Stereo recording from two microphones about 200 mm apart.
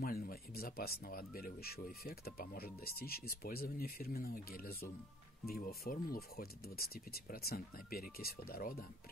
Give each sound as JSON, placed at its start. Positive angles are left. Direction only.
{"t": 0.0, "sound": "speech", "side_deg": 50}